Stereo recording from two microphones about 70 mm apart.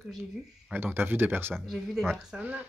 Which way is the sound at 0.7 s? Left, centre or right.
Right.